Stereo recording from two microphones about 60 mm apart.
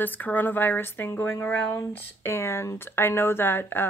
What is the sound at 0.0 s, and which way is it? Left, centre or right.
A woman's voice, left.